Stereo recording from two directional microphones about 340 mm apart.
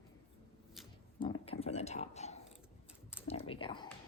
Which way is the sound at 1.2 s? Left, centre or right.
Centre.